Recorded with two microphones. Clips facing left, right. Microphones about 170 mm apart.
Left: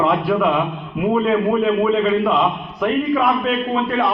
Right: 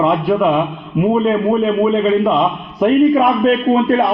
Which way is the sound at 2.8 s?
40° right (ahead or behind).